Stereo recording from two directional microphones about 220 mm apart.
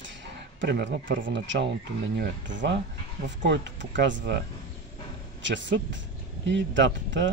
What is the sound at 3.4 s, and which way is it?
Speech, 55° right (ahead or behind).